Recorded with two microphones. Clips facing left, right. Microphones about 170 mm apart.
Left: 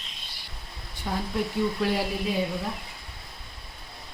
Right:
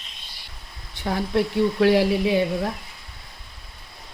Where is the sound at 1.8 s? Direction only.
85° right.